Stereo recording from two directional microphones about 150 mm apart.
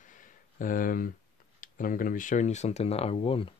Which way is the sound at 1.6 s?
65° left (ahead or behind).